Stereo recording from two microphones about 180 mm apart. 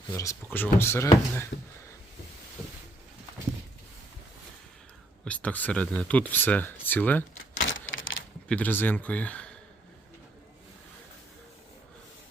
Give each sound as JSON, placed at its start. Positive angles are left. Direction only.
{"t": 0.1, "sound": "speech", "side_deg": 15}
{"t": 5.2, "sound": "speech", "side_deg": 10}
{"t": 7.7, "sound": "a sound", "side_deg": 90}
{"t": 8.4, "sound": "speech", "side_deg": 10}